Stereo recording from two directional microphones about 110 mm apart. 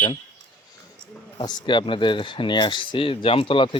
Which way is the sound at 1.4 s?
40° left (ahead or behind).